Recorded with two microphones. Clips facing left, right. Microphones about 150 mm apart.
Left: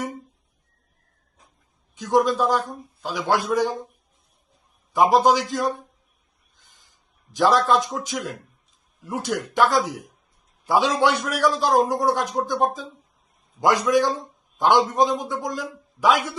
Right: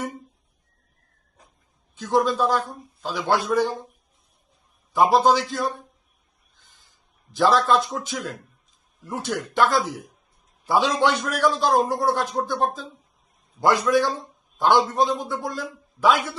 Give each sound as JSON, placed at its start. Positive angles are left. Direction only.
{"t": 2.0, "sound": "a man's voice", "side_deg": 15}
{"t": 4.9, "sound": "a man's voice", "side_deg": 10}
{"t": 7.3, "sound": "a man's voice", "side_deg": 15}